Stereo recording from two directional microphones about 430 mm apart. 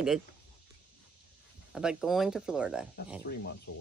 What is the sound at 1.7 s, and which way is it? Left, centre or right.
Speech, centre.